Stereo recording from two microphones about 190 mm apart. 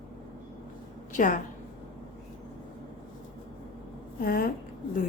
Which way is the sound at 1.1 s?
40° left (ahead or behind).